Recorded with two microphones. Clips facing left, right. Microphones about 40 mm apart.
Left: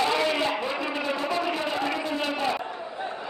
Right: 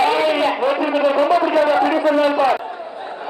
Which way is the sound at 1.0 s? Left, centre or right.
Right.